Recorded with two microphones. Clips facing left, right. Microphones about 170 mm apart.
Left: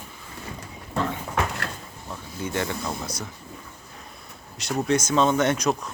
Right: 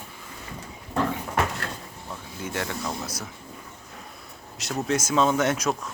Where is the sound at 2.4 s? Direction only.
Centre (ahead or behind).